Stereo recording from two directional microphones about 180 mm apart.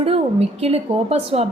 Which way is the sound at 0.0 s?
35° right (ahead or behind).